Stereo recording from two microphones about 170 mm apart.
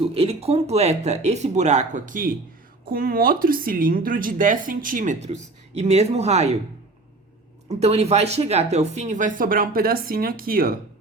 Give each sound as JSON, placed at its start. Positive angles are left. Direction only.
{"t": 0.0, "sound": "speech", "side_deg": -35}
{"t": 7.7, "sound": "speech", "side_deg": -40}